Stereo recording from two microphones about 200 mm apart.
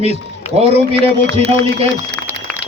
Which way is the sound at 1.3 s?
30° right (ahead or behind).